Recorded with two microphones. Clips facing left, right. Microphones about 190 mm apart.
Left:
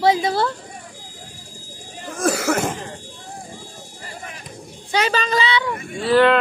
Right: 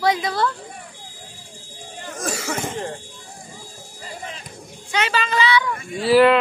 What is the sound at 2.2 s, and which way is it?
Cough, 65° left (ahead or behind).